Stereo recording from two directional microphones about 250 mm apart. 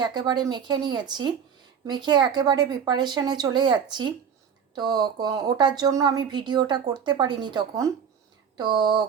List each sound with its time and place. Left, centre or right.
0.0 s speech: centre